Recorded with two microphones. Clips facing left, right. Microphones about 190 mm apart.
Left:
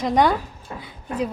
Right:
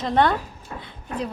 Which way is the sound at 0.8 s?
10° left (ahead or behind).